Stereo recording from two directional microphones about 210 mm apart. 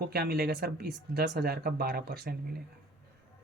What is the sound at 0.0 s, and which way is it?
Speech, 50° right (ahead or behind).